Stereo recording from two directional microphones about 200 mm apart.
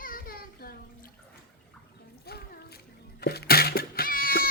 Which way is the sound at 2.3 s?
50° left (ahead or behind).